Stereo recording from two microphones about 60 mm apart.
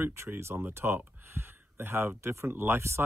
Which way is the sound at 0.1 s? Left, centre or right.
Right.